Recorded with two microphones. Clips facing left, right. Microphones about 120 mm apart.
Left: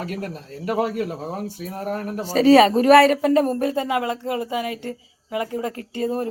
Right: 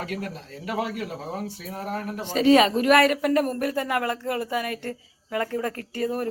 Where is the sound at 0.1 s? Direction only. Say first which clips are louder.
Left 2 dB; 40° left (ahead or behind).